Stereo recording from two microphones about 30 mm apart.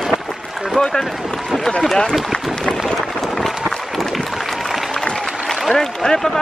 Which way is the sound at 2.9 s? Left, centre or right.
Centre.